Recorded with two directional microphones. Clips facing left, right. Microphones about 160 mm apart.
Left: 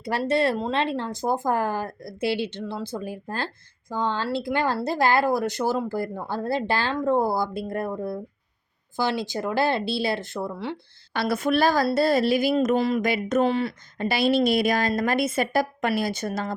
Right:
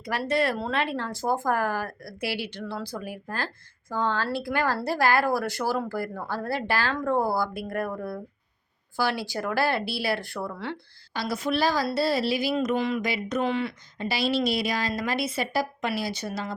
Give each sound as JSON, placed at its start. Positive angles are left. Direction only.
{"t": 0.0, "sound": "speech", "side_deg": 30}
{"t": 11.1, "sound": "a woman's voice", "side_deg": 60}
{"t": 14.1, "sound": "a woman's voice", "side_deg": 55}